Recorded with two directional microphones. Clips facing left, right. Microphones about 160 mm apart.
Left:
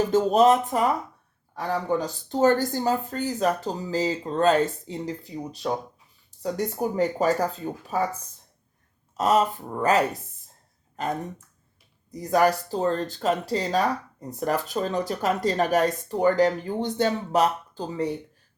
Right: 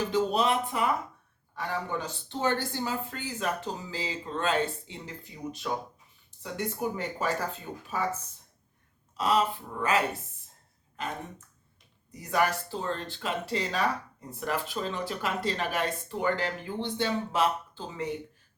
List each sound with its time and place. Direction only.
0.1 s speech: 45° left (ahead or behind)
9.1 s speech: 45° left (ahead or behind)
12.1 s speech: 40° left (ahead or behind)